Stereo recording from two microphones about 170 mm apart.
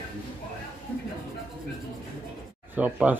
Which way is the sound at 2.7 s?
10° right (ahead or behind).